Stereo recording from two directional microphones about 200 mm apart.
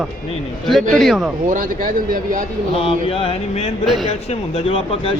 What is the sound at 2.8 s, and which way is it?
Speech, 30° left (ahead or behind).